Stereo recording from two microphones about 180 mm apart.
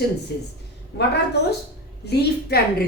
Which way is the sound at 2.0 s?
65° left (ahead or behind).